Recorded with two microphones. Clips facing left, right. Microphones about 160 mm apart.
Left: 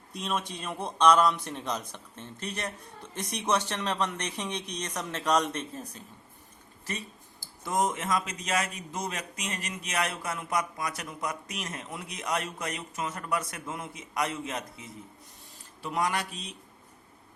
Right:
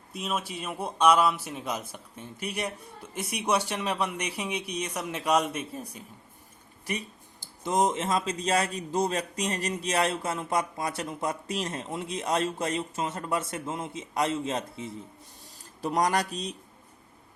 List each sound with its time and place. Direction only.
0.1 s a man's voice: 5° right (ahead or behind); by 14.9 s 30° right (ahead or behind)
15.8 s a man's voice: 40° right (ahead or behind)